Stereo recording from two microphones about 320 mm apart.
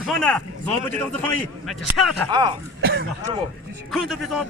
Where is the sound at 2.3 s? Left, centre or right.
Centre.